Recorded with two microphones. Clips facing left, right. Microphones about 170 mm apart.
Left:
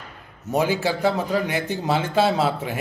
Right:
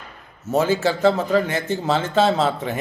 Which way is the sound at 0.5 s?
15° left (ahead or behind).